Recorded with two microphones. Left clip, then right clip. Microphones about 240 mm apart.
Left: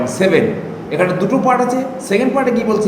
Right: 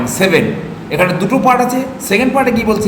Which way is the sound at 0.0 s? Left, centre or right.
Centre.